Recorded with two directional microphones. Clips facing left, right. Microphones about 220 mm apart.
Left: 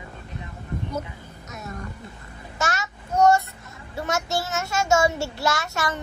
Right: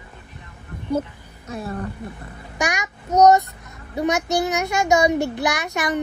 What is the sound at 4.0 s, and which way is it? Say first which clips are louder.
A child's voice: right 6 dB; 15° right (ahead or behind).